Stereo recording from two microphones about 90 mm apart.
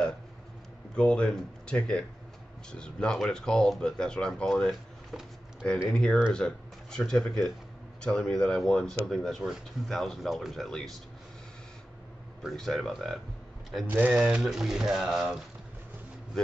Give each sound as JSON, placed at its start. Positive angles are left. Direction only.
{"t": 0.9, "sound": "speech", "side_deg": 10}
{"t": 5.9, "sound": "speech", "side_deg": 10}
{"t": 12.4, "sound": "speech", "side_deg": 0}
{"t": 13.8, "sound": "speech", "side_deg": -15}